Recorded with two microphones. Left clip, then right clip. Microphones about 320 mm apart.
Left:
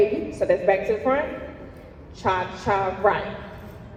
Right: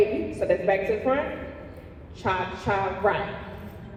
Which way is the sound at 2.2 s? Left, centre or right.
Left.